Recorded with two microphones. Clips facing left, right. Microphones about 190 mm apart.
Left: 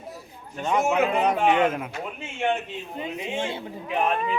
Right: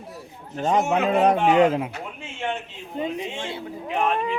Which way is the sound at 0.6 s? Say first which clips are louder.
Right 1 dB; 40° right (ahead or behind).